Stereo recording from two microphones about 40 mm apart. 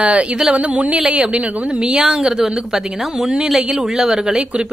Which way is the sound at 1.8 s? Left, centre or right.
Centre.